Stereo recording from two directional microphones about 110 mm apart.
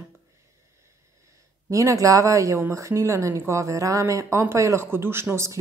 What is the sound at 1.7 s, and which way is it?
Speech, 30° right (ahead or behind).